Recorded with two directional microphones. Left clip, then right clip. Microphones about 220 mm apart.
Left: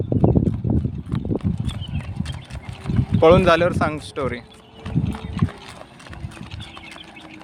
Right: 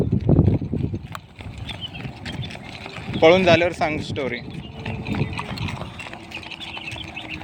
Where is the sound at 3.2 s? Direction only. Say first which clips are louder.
Left 1 dB; 20° left (ahead or behind).